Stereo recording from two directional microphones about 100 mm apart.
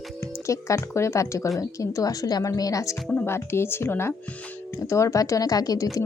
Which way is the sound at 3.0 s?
20° left (ahead or behind).